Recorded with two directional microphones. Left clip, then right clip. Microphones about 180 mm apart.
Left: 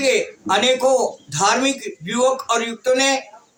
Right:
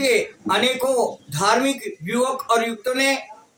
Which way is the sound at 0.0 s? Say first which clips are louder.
Left 1 dB; 25° left (ahead or behind).